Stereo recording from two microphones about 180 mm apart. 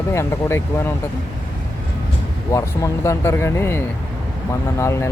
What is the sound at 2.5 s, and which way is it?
Speech, 15° left (ahead or behind).